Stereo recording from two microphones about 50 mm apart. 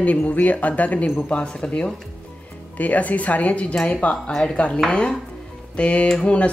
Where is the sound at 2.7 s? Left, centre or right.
Left.